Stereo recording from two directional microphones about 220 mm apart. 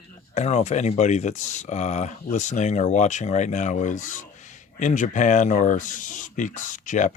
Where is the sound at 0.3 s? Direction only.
30° left (ahead or behind).